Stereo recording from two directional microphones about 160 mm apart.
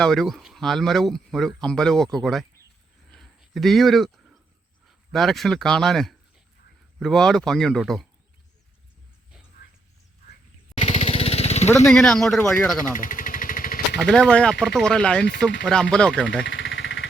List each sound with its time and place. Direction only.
0.0 s speech: centre (ahead or behind)
3.1 s a sound: centre (ahead or behind)
5.1 s speech: centre (ahead or behind)
10.8 s vehicle: 45° left (ahead or behind)
11.9 s speech: 5° left (ahead or behind)
12.9 s vehicle: 55° left (ahead or behind)
14.0 s speech: 5° left (ahead or behind)